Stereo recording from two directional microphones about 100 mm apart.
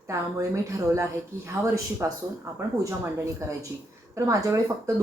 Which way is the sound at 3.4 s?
30° right (ahead or behind).